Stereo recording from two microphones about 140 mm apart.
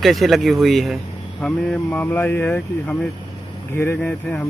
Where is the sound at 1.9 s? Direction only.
15° left (ahead or behind).